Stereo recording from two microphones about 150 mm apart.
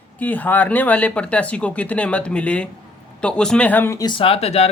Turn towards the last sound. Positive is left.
turn(degrees=45)  # may be behind; listen again after turning